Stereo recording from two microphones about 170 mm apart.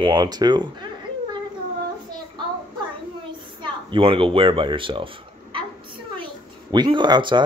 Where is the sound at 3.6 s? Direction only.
30° right (ahead or behind).